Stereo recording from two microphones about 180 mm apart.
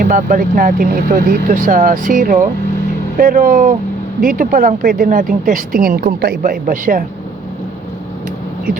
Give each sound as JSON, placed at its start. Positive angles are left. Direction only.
{"t": 0.0, "sound": "speech", "side_deg": -50}